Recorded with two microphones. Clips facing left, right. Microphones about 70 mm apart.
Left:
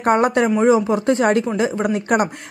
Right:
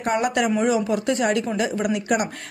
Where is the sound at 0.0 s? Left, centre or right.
Left.